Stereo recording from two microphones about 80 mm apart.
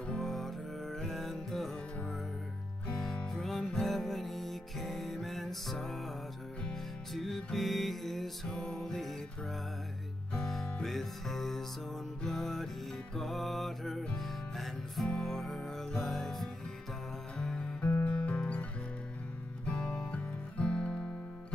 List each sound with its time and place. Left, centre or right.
0.0 s music: centre
2.9 s music: centre
10.3 s music: centre